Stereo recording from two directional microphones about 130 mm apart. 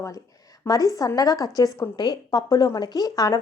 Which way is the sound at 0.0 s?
25° left (ahead or behind).